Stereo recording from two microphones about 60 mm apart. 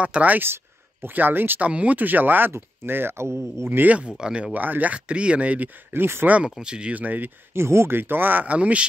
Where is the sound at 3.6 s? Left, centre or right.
Right.